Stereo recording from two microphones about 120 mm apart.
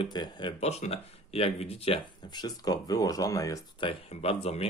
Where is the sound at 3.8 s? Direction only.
50° left (ahead or behind).